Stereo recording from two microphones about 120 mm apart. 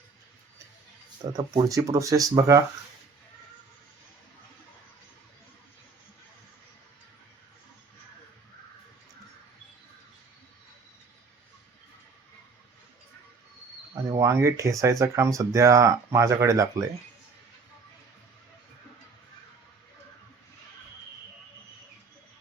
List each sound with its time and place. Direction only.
1.4 s speech: 30° right (ahead or behind)
13.9 s speech: 25° right (ahead or behind)